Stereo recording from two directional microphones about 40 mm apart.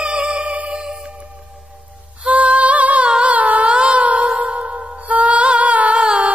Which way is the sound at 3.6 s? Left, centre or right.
Right.